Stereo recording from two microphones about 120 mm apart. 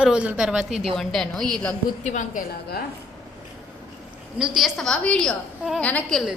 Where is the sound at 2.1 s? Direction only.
90° left.